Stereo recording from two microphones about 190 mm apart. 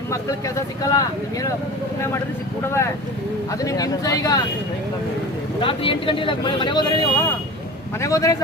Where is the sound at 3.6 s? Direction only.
20° left (ahead or behind).